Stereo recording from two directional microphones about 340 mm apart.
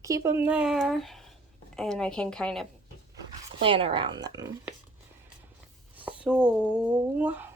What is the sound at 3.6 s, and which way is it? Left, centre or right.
Speech, centre.